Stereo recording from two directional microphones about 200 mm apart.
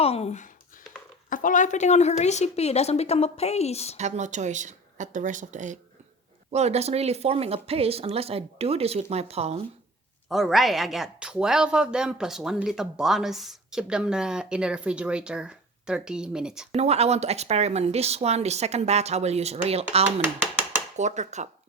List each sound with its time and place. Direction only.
0.0 s a woman's voice: 30° left (ahead or behind)
3.9 s speech: 35° right (ahead or behind)
10.2 s speech: centre (ahead or behind)
16.7 s speech: 30° right (ahead or behind)